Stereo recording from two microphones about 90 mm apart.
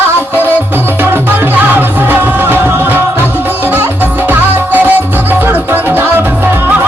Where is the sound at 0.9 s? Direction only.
20° right (ahead or behind).